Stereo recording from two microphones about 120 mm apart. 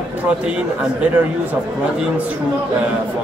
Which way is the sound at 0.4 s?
10° right (ahead or behind).